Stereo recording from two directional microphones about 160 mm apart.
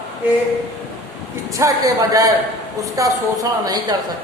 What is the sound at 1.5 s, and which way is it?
Speech, 20° right (ahead or behind).